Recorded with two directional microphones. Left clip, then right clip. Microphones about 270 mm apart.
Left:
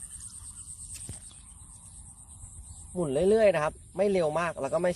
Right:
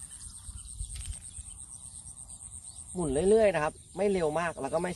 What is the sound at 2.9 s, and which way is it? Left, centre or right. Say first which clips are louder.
Speech: left 1 dB; left.